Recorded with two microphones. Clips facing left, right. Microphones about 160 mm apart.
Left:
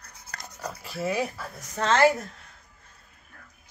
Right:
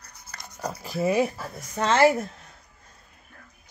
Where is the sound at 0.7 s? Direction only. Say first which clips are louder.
Right 4 dB; 30° right (ahead or behind).